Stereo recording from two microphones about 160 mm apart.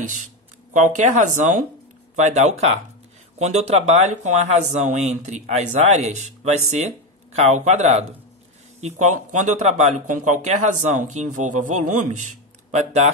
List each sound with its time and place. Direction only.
0.7 s speech: 50° right (ahead or behind)